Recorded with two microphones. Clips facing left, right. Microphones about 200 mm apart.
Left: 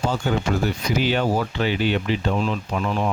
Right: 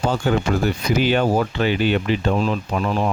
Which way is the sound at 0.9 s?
55° right (ahead or behind).